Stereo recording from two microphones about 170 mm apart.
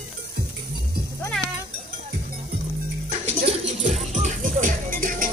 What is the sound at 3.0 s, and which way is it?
Music, 40° right (ahead or behind).